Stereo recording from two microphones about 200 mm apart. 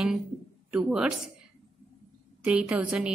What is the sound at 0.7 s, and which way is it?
Speech, 5° right (ahead or behind).